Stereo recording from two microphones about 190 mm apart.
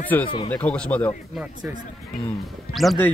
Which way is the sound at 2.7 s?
5° left (ahead or behind).